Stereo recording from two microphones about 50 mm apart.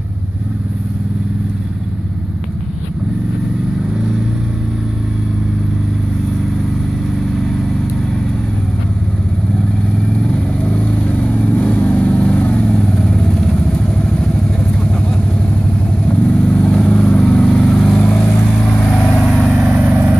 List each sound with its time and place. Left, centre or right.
7.3 s vehicle: centre
10.2 s vehicle: centre
16.1 s vehicle: left
18.0 s vehicle: left
19.3 s vehicle: centre
19.7 s vehicle: right